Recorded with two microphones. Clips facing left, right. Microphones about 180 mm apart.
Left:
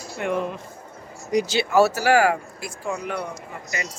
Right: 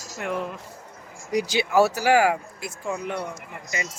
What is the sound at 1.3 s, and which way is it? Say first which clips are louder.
Speech: left 2 dB; 10° right (ahead or behind).